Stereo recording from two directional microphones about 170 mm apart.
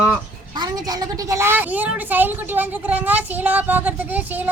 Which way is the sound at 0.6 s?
20° right (ahead or behind).